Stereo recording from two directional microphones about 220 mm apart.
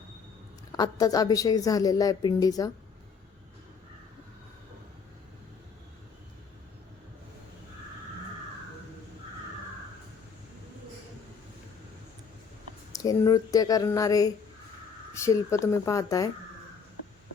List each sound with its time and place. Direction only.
0.7 s a woman's voice: 15° left (ahead or behind)
12.9 s a woman's voice: 15° left (ahead or behind)